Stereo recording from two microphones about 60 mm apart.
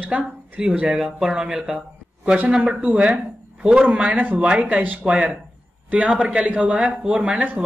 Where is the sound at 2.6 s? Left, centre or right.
Right.